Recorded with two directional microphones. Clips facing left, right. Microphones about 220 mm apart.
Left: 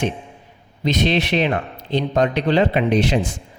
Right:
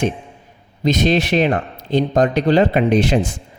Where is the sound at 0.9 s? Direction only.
45° right (ahead or behind).